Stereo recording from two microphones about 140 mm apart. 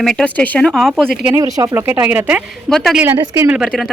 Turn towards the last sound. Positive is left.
turn(degrees=0)  # may be behind; listen again after turning